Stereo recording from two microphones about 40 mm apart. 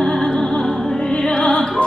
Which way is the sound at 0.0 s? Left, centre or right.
Centre.